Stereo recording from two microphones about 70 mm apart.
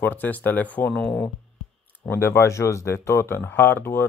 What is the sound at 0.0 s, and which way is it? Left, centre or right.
Speech, left.